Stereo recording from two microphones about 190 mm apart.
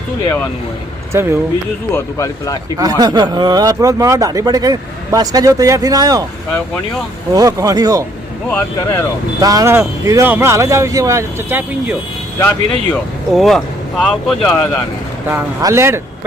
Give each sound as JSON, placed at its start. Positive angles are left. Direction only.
{"t": 1.1, "sound": "speech", "side_deg": -15}
{"t": 2.1, "sound": "speech", "side_deg": 15}
{"t": 2.7, "sound": "speech", "side_deg": -20}
{"t": 7.3, "sound": "speech", "side_deg": -20}
{"t": 8.4, "sound": "speech", "side_deg": 5}
{"t": 9.4, "sound": "speech", "side_deg": -20}
{"t": 12.4, "sound": "speech", "side_deg": 5}
{"t": 15.6, "sound": "speech", "side_deg": -15}